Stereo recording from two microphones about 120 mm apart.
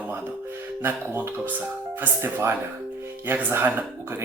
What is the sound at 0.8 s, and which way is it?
Speech, 20° right (ahead or behind).